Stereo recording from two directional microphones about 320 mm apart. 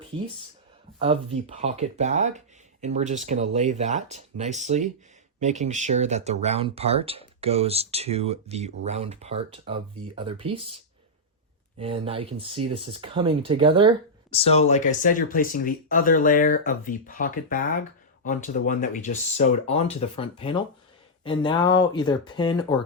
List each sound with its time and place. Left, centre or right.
0.9 s speech: centre
11.8 s speech: centre
14.3 s speech: centre